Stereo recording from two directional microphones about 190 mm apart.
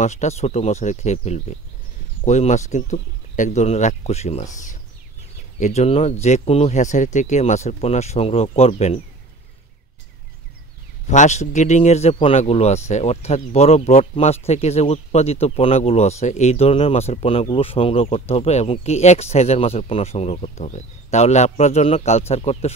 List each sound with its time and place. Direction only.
0.0 s speech: 40° left (ahead or behind)
11.1 s speech: 40° left (ahead or behind)